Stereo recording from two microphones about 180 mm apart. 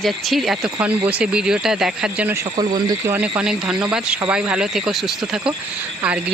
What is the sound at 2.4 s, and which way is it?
Speech, 20° right (ahead or behind).